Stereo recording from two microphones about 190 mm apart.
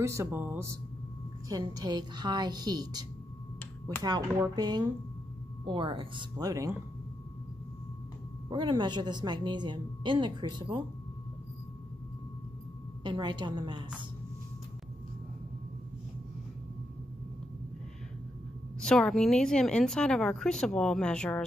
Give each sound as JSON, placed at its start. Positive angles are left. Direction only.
{"t": 0.0, "sound": "a woman's voice", "side_deg": -15}
{"t": 8.5, "sound": "a woman's voice", "side_deg": -25}
{"t": 13.0, "sound": "a woman's voice", "side_deg": -25}
{"t": 18.8, "sound": "a woman's voice", "side_deg": 5}